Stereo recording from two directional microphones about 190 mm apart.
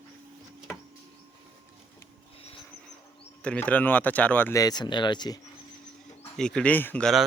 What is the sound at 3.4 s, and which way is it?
Speech, 5° left (ahead or behind).